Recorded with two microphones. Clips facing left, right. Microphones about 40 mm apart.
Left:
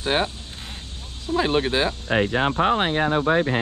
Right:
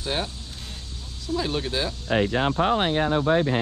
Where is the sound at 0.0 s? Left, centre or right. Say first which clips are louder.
Left 6 dB; left.